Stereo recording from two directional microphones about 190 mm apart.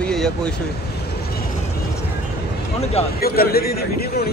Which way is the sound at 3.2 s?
55° left (ahead or behind).